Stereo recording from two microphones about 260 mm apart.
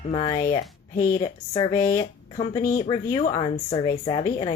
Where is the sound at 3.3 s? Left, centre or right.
Centre.